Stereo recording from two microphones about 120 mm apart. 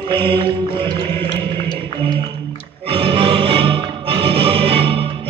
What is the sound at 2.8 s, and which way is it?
Music, 50° right (ahead or behind).